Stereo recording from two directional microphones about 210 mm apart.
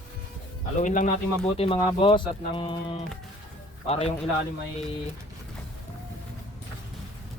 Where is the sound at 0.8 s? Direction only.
35° left (ahead or behind).